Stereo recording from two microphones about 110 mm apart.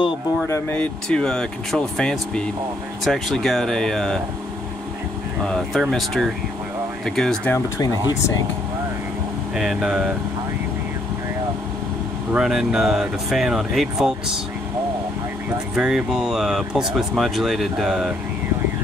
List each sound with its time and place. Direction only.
0.7 s speech: 5° left (ahead or behind)
5.4 s speech: 5° left (ahead or behind)
7.5 s speech: 30° left (ahead or behind)
9.6 s speech: 5° right (ahead or behind)
12.3 s speech: 5° right (ahead or behind)
15.7 s speech: 5° right (ahead or behind)